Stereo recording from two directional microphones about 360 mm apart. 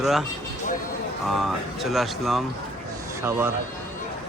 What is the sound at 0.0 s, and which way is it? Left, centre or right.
Speech, centre.